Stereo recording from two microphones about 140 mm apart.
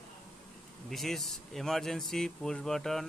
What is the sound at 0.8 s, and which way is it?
Speech, centre (ahead or behind).